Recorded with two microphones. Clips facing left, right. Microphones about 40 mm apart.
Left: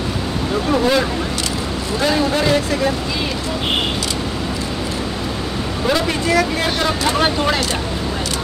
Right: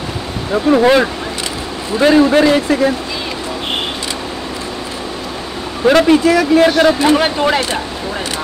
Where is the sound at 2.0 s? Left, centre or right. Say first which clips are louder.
Right 8 dB; right.